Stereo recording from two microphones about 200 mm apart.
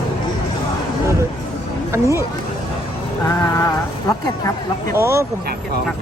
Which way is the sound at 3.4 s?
15° left (ahead or behind).